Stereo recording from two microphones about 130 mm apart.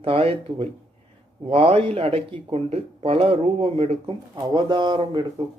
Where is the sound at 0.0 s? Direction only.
45° right (ahead or behind).